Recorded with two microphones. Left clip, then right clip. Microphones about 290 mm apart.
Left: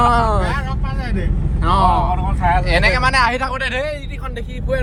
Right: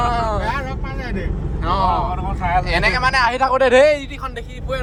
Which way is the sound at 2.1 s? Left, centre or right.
Left.